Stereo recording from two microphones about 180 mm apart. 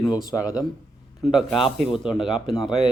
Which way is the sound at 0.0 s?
20° left (ahead or behind).